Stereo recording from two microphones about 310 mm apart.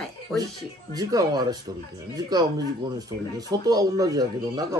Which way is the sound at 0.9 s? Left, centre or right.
Centre.